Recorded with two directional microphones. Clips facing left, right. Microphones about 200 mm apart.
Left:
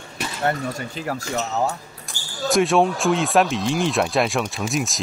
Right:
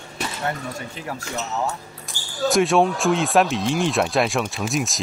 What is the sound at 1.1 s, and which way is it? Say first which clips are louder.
Speech: left 4 dB; 40° left (ahead or behind).